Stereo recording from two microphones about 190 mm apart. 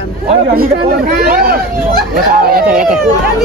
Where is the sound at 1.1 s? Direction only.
55° right (ahead or behind).